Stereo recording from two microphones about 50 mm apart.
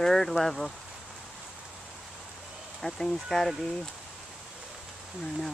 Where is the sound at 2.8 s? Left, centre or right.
Centre.